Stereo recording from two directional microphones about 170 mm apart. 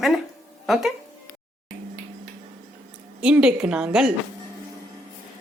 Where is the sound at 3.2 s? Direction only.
5° right (ahead or behind).